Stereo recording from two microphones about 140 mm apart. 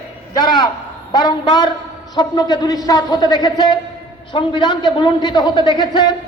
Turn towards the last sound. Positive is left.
turn(degrees=30)  # may be behind; listen again after turning